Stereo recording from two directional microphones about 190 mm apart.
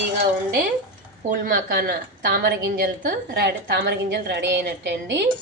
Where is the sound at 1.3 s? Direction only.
50° right (ahead or behind).